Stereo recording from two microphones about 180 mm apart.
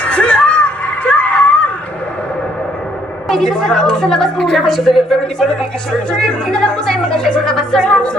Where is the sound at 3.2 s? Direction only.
5° left (ahead or behind).